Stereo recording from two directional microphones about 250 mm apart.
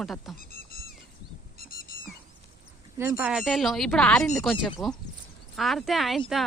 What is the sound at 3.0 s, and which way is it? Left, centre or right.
Speech, centre.